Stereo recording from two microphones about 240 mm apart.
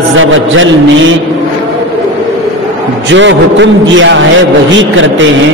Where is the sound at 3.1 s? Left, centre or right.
Right.